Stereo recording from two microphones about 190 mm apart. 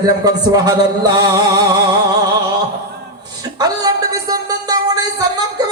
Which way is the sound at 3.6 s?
20° right (ahead or behind).